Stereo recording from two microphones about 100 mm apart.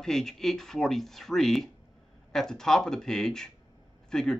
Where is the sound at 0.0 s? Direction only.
5° left (ahead or behind).